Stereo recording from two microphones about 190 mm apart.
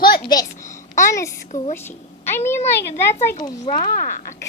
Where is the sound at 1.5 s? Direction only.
40° left (ahead or behind).